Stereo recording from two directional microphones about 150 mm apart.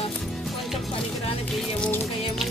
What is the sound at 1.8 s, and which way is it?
Music, 5° left (ahead or behind).